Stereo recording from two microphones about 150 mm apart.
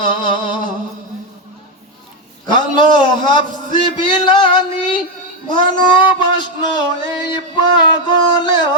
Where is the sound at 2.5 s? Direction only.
30° left (ahead or behind).